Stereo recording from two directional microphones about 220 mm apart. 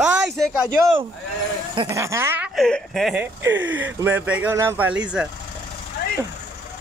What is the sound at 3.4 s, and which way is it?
Speech, 55° right (ahead or behind).